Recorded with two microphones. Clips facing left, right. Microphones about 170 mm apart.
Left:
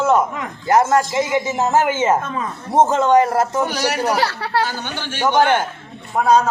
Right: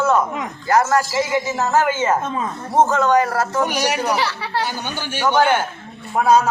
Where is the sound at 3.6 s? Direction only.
15° right (ahead or behind).